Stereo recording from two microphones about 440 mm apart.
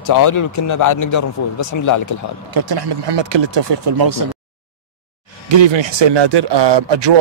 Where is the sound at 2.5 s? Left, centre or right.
Right.